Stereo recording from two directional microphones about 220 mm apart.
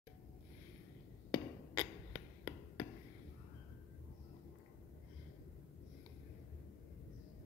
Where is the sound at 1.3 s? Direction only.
15° left (ahead or behind).